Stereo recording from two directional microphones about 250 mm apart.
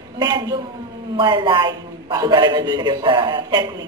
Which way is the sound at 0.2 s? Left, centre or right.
Centre.